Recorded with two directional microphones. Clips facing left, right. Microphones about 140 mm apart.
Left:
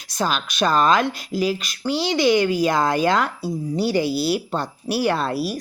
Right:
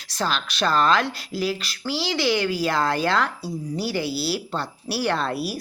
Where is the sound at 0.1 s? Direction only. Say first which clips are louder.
Left 3 dB; 15° left (ahead or behind).